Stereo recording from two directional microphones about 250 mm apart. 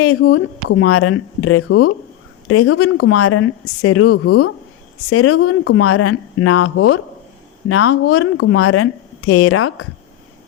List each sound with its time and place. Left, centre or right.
0.0 s speech: left